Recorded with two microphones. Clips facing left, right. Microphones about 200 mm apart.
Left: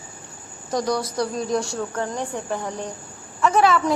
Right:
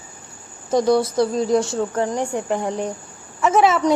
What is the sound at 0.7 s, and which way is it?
A woman's voice, 25° right (ahead or behind).